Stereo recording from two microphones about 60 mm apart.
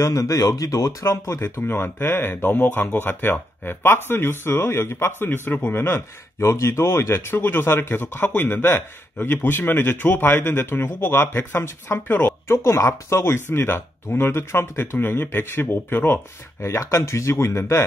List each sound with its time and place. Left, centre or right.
0.0 s speech: left
1.6 s speech: left
16.6 s speech: left